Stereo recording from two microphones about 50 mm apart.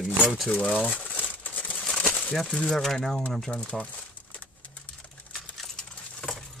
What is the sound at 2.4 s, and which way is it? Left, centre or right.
Speech, centre.